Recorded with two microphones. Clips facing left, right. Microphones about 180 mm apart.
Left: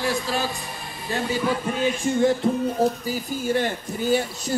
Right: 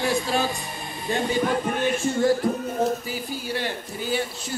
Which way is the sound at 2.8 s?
35° left (ahead or behind).